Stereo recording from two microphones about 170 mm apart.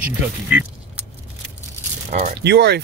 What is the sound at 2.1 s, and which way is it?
Speech, 45° right (ahead or behind).